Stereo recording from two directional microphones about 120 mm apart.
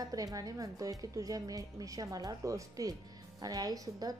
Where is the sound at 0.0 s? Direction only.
30° right (ahead or behind).